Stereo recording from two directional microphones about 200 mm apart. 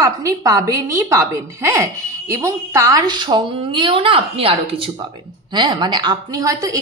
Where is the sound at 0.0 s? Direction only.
15° right (ahead or behind).